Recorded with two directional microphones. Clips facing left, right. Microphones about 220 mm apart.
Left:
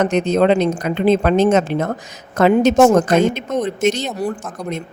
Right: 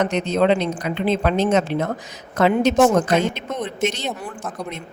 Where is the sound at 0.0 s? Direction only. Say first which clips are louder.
Left 4 dB; 45° left (ahead or behind).